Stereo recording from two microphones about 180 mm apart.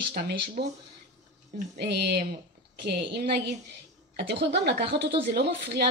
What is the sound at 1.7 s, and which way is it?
Speech, 65° right (ahead or behind).